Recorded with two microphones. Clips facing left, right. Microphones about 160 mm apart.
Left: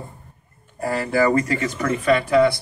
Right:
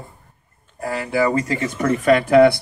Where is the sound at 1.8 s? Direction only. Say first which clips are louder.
Right 4 dB; 45° right (ahead or behind).